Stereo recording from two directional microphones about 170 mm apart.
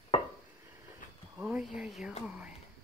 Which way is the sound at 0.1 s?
35° left (ahead or behind).